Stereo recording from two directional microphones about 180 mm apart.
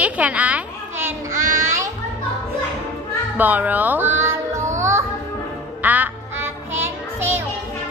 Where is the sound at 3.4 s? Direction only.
10° right (ahead or behind).